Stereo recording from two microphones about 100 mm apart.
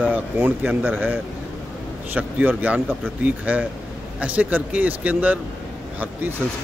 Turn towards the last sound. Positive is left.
turn(degrees=-15)  # may be behind; listen again after turning